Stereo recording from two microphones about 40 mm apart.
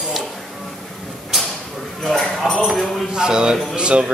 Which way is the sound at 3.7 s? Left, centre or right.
Right.